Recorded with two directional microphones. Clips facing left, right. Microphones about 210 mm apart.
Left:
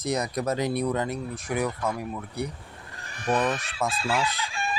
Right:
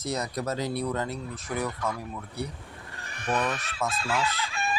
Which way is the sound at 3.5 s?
35° left (ahead or behind).